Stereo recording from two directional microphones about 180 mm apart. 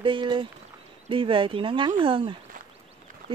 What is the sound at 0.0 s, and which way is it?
Speech, 25° right (ahead or behind).